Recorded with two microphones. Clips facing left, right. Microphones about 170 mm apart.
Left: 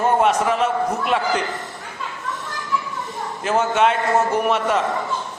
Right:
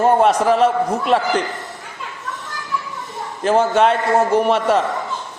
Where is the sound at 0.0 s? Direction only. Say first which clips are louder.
Right 4 dB; 35° right (ahead or behind).